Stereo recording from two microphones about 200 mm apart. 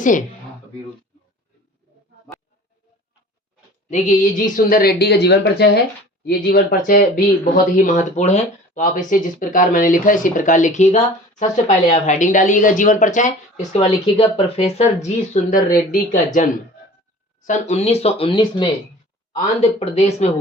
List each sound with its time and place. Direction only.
3.8 s speech: 35° left (ahead or behind)